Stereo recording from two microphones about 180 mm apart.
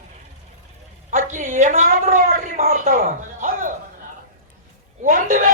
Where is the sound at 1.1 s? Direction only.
45° right (ahead or behind).